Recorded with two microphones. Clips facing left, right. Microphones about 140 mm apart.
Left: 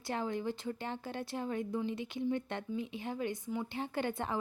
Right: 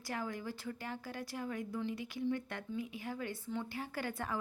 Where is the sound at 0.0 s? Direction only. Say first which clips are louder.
Left 5 dB; 25° left (ahead or behind).